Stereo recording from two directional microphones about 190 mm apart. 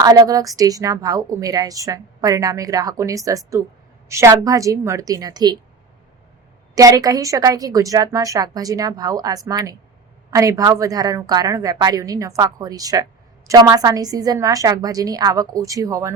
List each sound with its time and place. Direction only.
0.0 s a woman's voice: 20° right (ahead or behind)
6.7 s a woman's voice: 20° right (ahead or behind)